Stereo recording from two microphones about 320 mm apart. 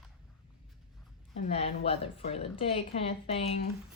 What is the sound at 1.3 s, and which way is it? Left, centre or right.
Speech, centre.